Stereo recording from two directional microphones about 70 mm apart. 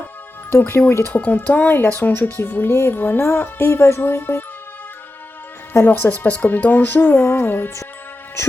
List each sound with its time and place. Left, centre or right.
0.5 s a woman's voice: left
5.7 s speech: left